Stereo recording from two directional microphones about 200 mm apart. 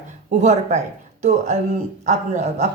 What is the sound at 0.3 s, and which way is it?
Speech, 35° right (ahead or behind).